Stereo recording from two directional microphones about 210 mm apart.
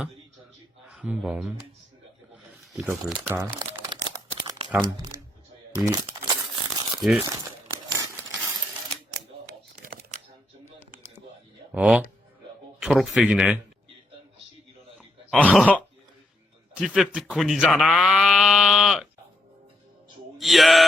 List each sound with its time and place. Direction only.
0.9 s speech: 5° right (ahead or behind)
2.3 s a sound: 5° right (ahead or behind)
3.8 s crumpling: 20° right (ahead or behind)
5.7 s a sound: 15° right (ahead or behind)
7.4 s crumpling: 15° right (ahead or behind)
9.5 s typing: 45° right (ahead or behind)
11.7 s speech: 5° right (ahead or behind)
15.3 s speech: 5° left (ahead or behind)
16.7 s speech: 5° right (ahead or behind)
20.4 s speech: centre (ahead or behind)